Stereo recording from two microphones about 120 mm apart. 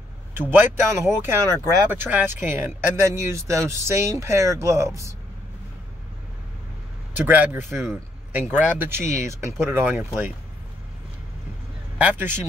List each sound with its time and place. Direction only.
0.3 s speech: 20° right (ahead or behind)
7.2 s speech: 15° right (ahead or behind)
12.0 s speech: 15° right (ahead or behind)